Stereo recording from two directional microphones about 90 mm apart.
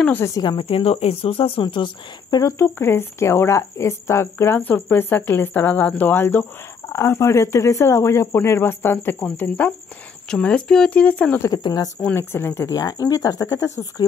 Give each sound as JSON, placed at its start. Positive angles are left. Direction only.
{"t": 0.4, "sound": "speech", "side_deg": 65}
{"t": 2.6, "sound": "speech", "side_deg": 25}
{"t": 11.5, "sound": "speech", "side_deg": 50}
{"t": 12.0, "sound": "speech", "side_deg": 25}